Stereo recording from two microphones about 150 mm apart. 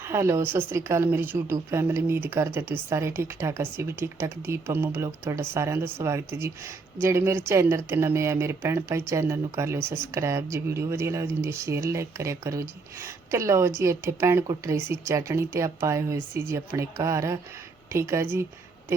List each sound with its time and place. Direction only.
0.0 s speech: 15° right (ahead or behind)